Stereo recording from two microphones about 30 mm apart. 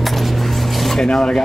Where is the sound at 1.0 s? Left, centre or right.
Left.